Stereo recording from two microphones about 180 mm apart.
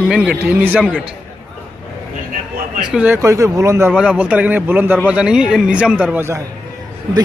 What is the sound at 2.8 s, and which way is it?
A man's voice, 5° right (ahead or behind).